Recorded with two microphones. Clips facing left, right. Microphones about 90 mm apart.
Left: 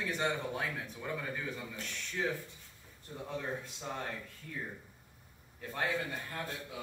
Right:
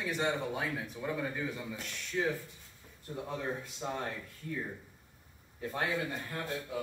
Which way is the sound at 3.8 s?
15° right (ahead or behind).